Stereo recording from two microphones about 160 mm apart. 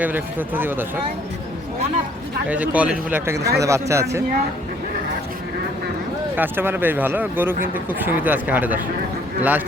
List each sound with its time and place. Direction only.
0.0 s speech: 10° right (ahead or behind)
2.5 s speech: 10° right (ahead or behind)
6.3 s speech: 10° right (ahead or behind)